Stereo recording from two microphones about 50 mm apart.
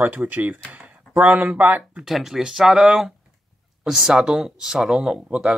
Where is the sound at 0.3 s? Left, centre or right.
Right.